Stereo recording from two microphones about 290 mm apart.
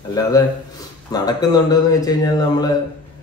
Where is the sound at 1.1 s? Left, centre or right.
Centre.